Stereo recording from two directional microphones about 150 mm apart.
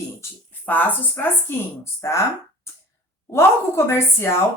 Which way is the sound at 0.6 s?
10° left (ahead or behind).